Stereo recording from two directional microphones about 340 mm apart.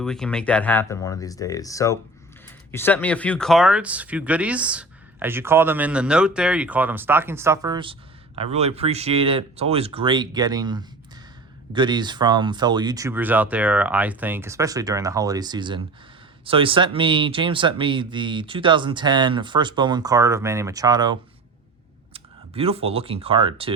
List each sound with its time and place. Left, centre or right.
0.0 s speech: centre